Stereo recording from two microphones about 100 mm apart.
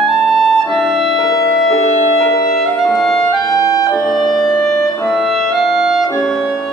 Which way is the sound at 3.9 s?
Centre (ahead or behind).